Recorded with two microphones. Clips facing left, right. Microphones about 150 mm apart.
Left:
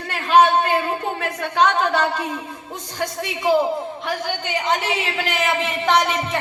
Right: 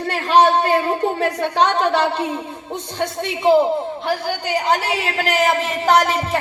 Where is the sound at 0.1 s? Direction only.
35° right (ahead or behind).